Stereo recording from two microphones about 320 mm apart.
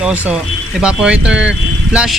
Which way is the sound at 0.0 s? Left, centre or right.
Centre.